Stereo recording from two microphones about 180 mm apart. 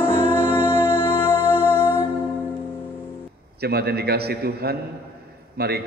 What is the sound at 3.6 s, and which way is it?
A man's voice, 60° right (ahead or behind).